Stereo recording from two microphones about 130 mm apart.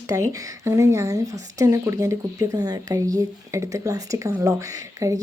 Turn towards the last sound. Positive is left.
turn(degrees=-25)  # may be behind; listen again after turning